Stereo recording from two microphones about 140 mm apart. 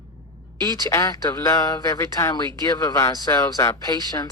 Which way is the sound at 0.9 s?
25° left (ahead or behind).